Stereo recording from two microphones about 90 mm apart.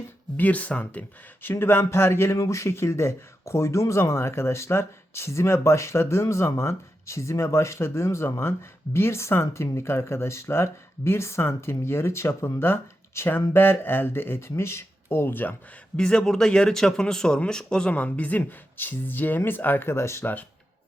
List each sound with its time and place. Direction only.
0.3 s speech: 15° left (ahead or behind)
16.0 s speech: 10° left (ahead or behind); by 20.4 s 25° left (ahead or behind)